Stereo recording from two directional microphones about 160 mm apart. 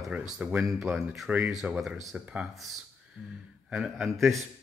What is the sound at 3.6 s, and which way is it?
Speech, 5° right (ahead or behind).